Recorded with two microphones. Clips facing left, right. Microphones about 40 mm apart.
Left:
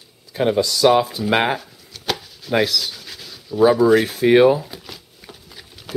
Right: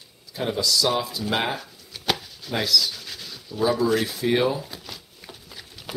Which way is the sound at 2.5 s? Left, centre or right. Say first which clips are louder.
Left 5 dB; left.